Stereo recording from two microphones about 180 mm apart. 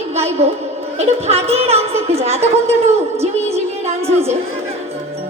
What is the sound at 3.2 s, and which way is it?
Music, 35° right (ahead or behind).